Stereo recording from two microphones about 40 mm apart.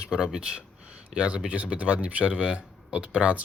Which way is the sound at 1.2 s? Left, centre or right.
Right.